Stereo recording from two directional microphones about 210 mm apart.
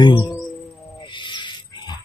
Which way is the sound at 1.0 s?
20° left (ahead or behind).